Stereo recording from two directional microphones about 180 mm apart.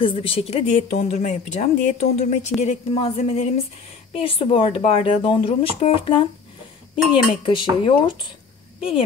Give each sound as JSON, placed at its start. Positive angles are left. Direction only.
{"t": 0.0, "sound": "speech", "side_deg": 30}